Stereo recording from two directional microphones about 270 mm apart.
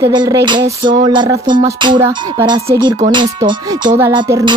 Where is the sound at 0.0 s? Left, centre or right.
Centre.